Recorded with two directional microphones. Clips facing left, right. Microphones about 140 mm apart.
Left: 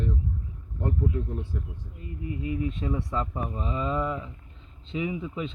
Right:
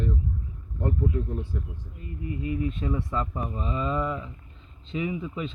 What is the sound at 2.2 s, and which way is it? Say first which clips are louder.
Speech: right 1 dB; 20° left (ahead or behind).